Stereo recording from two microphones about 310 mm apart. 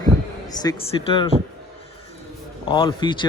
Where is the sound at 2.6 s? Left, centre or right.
Centre.